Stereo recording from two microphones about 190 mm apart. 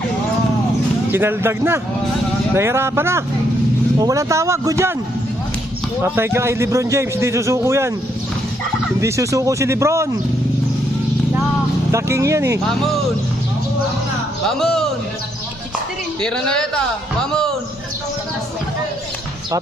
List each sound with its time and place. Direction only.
1.1 s a man's voice: 10° right (ahead or behind)
6.0 s a man's voice: 15° right (ahead or behind)
9.0 s a man's voice: 15° right (ahead or behind)
11.9 s speech: 15° right (ahead or behind)
14.6 s a man's voice: centre (ahead or behind)
16.2 s a man's voice: 5° left (ahead or behind)